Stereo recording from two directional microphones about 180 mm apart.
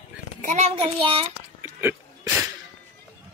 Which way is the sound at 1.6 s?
10° right (ahead or behind).